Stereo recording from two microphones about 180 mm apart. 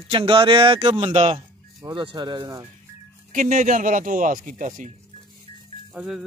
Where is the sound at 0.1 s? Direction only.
30° right (ahead or behind).